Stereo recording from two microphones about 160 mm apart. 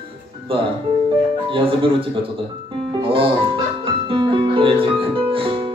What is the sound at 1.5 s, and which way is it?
Speech, 35° right (ahead or behind).